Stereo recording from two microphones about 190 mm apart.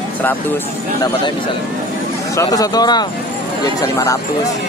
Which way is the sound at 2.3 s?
15° left (ahead or behind).